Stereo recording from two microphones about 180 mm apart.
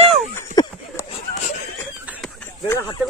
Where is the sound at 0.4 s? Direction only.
15° left (ahead or behind).